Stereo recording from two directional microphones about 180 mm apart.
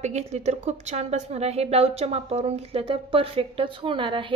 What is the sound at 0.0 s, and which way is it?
A woman's voice, 40° right (ahead or behind).